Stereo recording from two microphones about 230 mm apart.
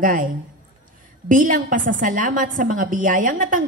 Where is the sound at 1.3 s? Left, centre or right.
Right.